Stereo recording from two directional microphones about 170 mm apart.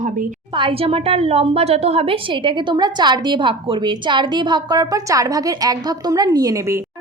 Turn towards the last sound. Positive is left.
turn(degrees=-15)  # may be behind; listen again after turning